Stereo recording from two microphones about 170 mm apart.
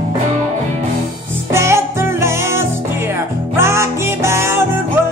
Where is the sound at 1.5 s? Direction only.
15° right (ahead or behind).